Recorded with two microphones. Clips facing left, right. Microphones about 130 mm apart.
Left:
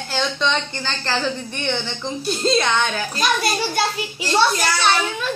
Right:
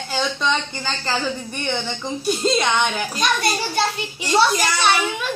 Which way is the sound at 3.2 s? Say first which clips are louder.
Left 1 dB; centre (ahead or behind).